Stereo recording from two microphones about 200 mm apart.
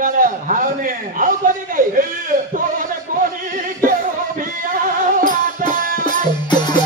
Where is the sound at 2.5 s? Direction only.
40° right (ahead or behind).